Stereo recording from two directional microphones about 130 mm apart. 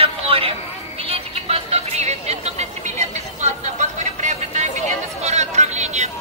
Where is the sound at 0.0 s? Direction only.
45° right (ahead or behind).